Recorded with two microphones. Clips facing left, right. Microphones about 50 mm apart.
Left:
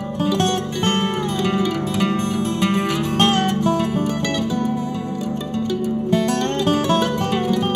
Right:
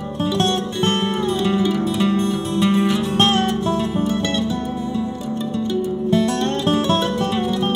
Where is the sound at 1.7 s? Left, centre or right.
Left.